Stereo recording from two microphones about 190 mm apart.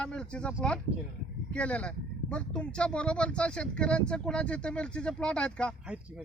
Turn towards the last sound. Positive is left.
turn(degrees=5)  # may be behind; listen again after turning